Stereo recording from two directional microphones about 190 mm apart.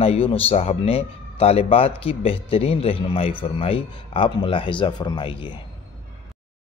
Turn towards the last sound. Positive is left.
turn(degrees=25)  # may be behind; listen again after turning